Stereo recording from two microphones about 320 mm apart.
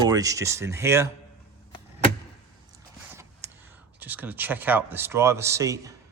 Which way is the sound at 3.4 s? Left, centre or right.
Centre.